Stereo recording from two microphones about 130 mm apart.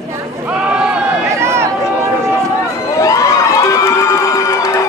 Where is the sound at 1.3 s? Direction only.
20° right (ahead or behind).